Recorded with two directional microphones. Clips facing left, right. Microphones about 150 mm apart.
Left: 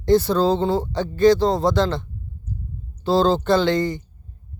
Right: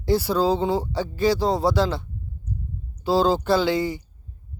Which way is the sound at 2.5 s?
30° left (ahead or behind).